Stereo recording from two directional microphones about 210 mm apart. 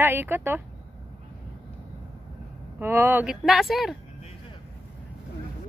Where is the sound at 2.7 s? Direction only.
10° right (ahead or behind).